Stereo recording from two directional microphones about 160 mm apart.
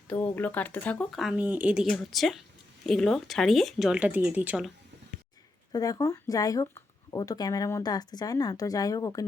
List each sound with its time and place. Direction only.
0.1 s speech: 10° left (ahead or behind); by 4.7 s 5° right (ahead or behind)
5.7 s speech: 25° left (ahead or behind)